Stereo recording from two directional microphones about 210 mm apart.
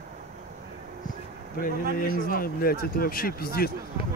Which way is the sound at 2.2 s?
45° left (ahead or behind).